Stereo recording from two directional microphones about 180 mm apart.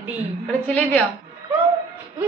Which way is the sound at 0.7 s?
5° left (ahead or behind).